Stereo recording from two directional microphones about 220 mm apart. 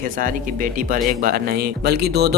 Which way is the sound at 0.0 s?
40° right (ahead or behind).